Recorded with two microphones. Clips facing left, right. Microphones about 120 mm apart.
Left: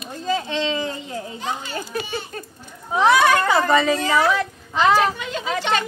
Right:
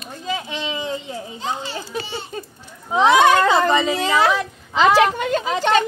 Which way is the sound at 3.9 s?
90° right.